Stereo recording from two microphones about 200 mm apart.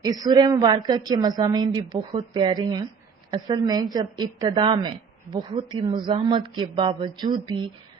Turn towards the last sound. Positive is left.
turn(degrees=-20)  # may be behind; listen again after turning